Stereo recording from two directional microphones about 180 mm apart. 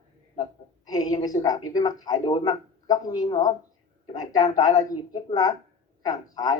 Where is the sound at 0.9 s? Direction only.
20° left (ahead or behind).